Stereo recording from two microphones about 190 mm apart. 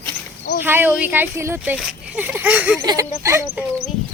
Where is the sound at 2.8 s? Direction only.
20° right (ahead or behind).